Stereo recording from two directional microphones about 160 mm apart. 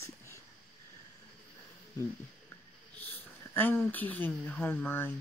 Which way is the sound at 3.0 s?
10° left (ahead or behind).